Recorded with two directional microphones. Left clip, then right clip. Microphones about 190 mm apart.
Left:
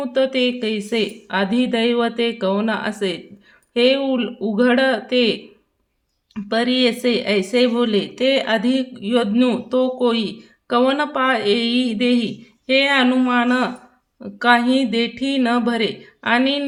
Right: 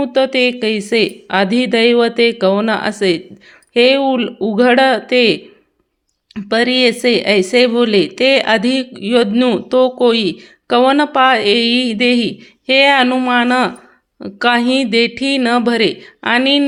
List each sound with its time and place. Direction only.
0.0 s speech: 25° right (ahead or behind)